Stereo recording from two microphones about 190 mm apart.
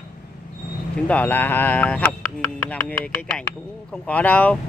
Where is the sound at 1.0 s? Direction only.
10° left (ahead or behind).